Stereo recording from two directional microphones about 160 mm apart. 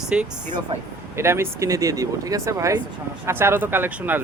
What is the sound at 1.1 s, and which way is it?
Speech, 15° right (ahead or behind).